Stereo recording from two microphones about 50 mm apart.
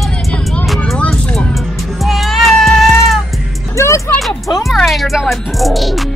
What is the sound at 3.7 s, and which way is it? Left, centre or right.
Speech, left.